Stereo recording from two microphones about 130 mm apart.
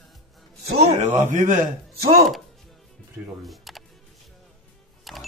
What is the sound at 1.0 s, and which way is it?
Speech, 70° right (ahead or behind).